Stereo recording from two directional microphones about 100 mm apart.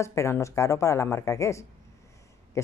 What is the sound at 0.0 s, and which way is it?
Speech, 30° left (ahead or behind).